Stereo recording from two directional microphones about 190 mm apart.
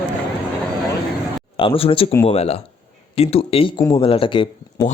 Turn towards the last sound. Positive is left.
turn(degrees=25)  # may be behind; listen again after turning